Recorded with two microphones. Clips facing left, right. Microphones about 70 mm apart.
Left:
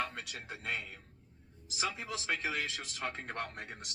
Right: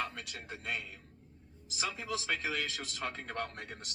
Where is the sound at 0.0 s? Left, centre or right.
Left.